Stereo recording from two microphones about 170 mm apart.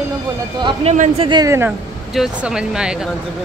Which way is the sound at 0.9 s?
45° right (ahead or behind).